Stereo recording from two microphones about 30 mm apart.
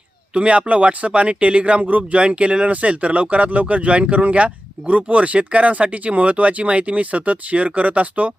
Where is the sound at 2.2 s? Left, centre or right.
Right.